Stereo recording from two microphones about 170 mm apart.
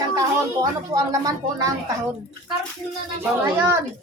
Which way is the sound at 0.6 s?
20° right (ahead or behind).